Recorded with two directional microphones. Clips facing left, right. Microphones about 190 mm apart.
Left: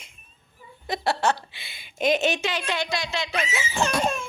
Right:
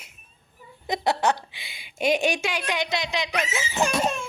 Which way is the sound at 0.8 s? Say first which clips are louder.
Right 1 dB; 20° right (ahead or behind).